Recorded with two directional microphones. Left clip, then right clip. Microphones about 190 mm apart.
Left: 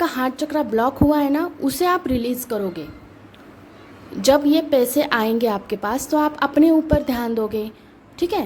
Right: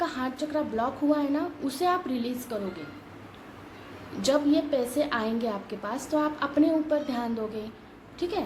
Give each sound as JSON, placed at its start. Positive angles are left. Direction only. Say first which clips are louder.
{"t": 0.0, "sound": "a woman's voice", "louder": "left 8 dB", "side_deg": 50}
{"t": 4.2, "sound": "a woman's voice", "louder": "left 8 dB", "side_deg": 50}